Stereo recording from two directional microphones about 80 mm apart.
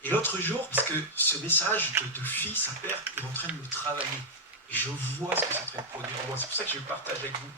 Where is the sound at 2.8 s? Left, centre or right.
Right.